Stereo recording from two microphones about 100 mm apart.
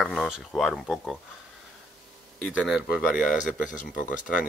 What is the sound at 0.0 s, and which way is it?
Speech, 5° left (ahead or behind).